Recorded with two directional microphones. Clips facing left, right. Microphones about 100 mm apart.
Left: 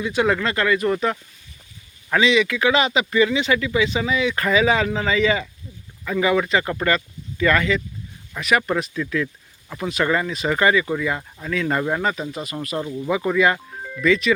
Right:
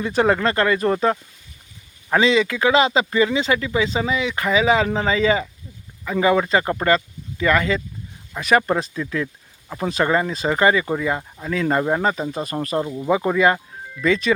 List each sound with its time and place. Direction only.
0.0 s speech: 40° right (ahead or behind); by 7.6 s 20° right (ahead or behind)
8.4 s speech: 35° right (ahead or behind)
11.2 s speech: 15° right (ahead or behind)
11.5 s speech: 30° right (ahead or behind)
12.0 s speech: 35° right (ahead or behind)